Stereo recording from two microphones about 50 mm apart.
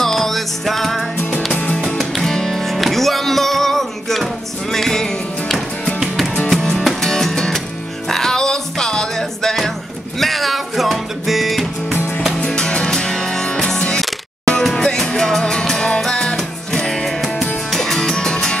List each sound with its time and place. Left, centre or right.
0.0 s music: centre
1.5 s music: left
2.0 s music: centre
12.4 s music: centre